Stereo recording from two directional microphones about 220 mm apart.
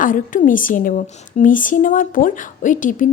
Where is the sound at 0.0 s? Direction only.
35° left (ahead or behind).